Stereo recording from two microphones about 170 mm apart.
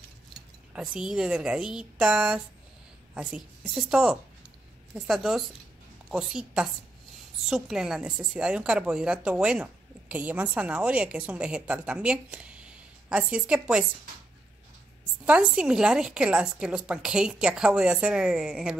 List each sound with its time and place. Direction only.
0.3 s a woman's voice: 5° right (ahead or behind)
15.2 s a woman's voice: 5° right (ahead or behind)